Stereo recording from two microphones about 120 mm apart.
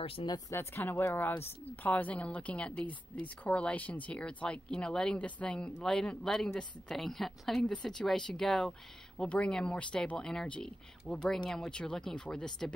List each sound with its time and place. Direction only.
0.0 s speech: 50° left (ahead or behind)
0.5 s speech: 20° left (ahead or behind)